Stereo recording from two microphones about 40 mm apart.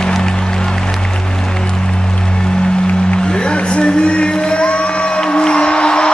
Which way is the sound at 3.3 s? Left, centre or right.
Left.